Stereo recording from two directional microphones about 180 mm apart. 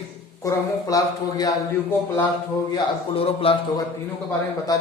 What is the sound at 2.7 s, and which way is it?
Speech, 30° left (ahead or behind).